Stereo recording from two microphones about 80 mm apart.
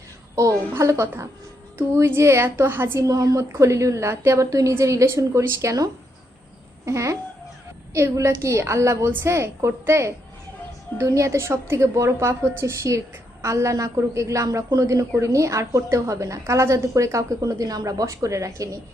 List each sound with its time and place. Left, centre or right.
0.7 s a woman's voice: right
3.1 s a woman's voice: right
3.5 s a woman's voice: right